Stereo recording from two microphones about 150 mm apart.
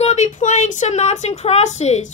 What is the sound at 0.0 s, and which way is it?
Speech, 50° left (ahead or behind).